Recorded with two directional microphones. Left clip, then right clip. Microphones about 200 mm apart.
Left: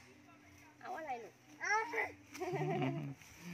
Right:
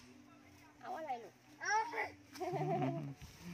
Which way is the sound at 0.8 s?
5° right (ahead or behind).